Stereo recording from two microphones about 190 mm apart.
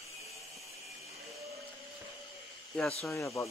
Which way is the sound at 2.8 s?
5° left (ahead or behind).